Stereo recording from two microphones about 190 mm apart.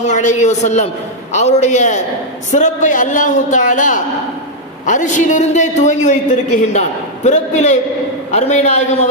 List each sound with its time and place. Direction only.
0.1 s a man's voice: 40° left (ahead or behind)
7.3 s a man's voice: 40° left (ahead or behind)